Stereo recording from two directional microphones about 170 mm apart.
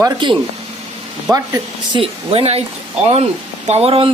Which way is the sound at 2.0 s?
35° right (ahead or behind).